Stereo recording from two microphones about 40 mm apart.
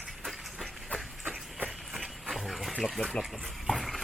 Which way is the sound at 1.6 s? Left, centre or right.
Centre.